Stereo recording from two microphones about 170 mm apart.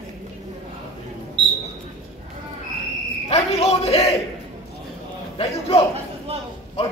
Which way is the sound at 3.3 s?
35° left (ahead or behind).